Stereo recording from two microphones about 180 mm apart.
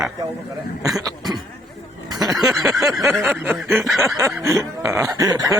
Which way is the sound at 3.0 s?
15° right (ahead or behind).